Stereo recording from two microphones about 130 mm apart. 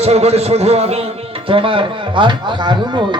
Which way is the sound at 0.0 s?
55° right (ahead or behind).